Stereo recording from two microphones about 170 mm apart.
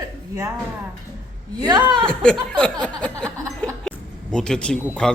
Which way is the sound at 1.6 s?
25° right (ahead or behind).